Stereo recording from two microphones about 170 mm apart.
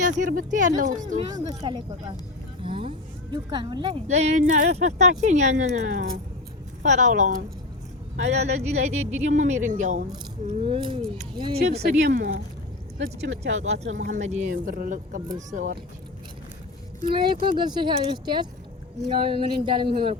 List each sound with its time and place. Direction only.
0.0 s speech: 50° right (ahead or behind)
1.3 s speech: 25° right (ahead or behind)
4.0 s speech: 40° right (ahead or behind)
8.6 s speech: 40° right (ahead or behind)
10.5 s speech: 30° right (ahead or behind)
11.8 s speech: 80° right
13.6 s speech: 40° right (ahead or behind)
17.4 s speech: 30° right (ahead or behind)